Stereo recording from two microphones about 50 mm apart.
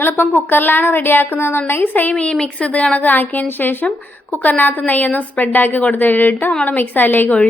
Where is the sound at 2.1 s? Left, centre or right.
Left.